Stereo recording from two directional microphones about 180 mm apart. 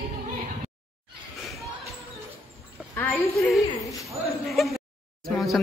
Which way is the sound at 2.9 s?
10° left (ahead or behind).